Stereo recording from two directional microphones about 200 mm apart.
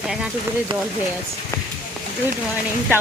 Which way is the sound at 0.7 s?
25° right (ahead or behind).